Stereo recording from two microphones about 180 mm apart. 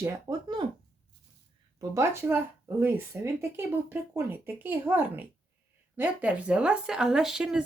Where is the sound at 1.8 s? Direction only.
15° right (ahead or behind).